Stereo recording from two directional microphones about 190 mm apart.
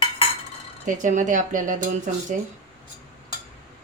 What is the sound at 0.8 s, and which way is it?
Speech, 40° right (ahead or behind).